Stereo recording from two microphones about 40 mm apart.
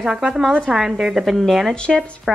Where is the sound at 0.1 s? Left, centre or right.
Centre.